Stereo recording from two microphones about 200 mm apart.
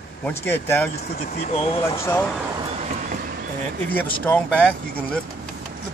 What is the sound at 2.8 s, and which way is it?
Vehicle, 45° right (ahead or behind).